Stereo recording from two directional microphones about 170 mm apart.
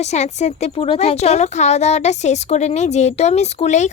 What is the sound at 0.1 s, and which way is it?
A woman's voice, 40° left (ahead or behind).